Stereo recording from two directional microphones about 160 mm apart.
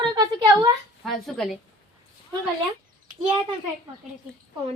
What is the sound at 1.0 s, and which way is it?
Music, centre (ahead or behind).